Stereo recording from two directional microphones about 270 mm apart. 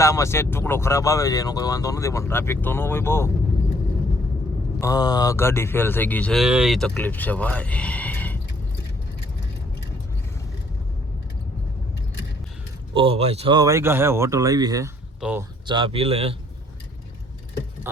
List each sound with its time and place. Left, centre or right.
0.0 s speech: centre
4.8 s speech: centre
12.9 s speech: centre
15.6 s speech: centre